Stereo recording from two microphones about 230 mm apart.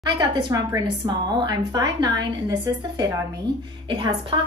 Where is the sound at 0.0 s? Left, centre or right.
Right.